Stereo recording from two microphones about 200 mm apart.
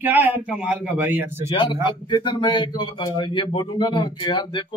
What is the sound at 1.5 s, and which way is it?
Speech, 25° left (ahead or behind).